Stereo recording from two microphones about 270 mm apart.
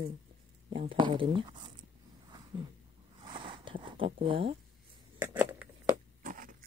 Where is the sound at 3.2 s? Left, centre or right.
Centre.